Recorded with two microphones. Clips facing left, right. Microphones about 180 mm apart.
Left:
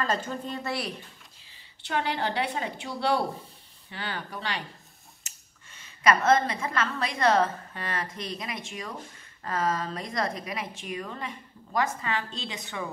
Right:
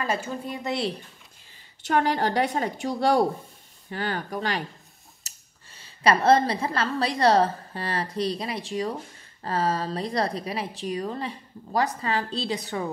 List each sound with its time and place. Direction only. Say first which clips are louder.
0.0 s a woman's voice: right 1 dB; 10° right (ahead or behind)
1.8 s a woman's voice: right 6 dB; 45° right (ahead or behind)